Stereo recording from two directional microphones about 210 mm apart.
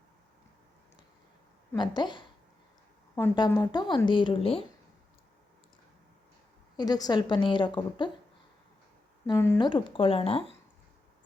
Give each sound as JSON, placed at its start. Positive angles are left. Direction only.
{"t": 1.7, "sound": "a woman's voice", "side_deg": 20}
{"t": 6.7, "sound": "a woman's voice", "side_deg": 20}
{"t": 9.2, "sound": "a woman's voice", "side_deg": 15}